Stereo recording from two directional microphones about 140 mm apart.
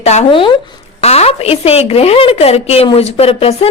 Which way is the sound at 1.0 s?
50° left (ahead or behind).